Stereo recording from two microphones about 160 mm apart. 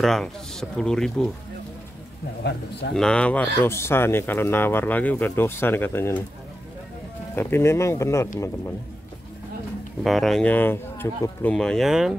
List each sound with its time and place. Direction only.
0.0 s speech: centre (ahead or behind)
2.4 s speech: 90° left
2.9 s speech: 5° left (ahead or behind)
7.3 s speech: 15° left (ahead or behind)
10.0 s speech: centre (ahead or behind)